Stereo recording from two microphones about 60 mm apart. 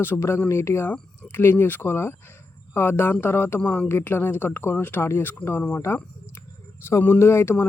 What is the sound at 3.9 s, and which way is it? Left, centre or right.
Speech, left.